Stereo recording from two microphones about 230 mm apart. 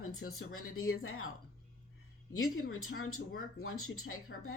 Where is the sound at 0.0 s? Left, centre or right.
Left.